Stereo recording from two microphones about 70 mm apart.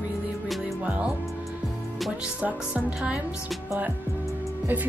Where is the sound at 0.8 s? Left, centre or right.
Right.